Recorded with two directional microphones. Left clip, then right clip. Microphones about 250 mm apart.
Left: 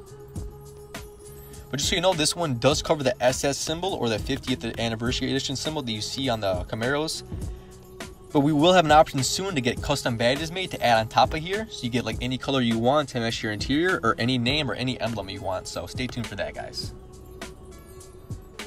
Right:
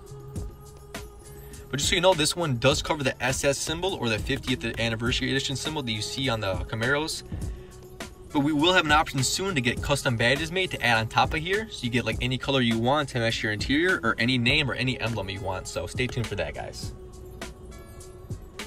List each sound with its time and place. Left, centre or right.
1.7 s speech: centre